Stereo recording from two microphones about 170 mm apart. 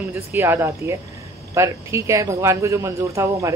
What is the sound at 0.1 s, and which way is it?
A woman's voice, 15° right (ahead or behind).